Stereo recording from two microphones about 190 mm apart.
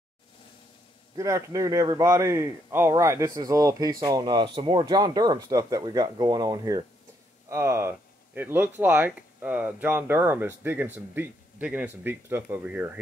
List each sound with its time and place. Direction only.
1.1 s a man's voice: 15° right (ahead or behind)